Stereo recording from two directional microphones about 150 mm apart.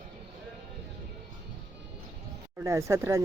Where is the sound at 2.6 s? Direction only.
20° right (ahead or behind).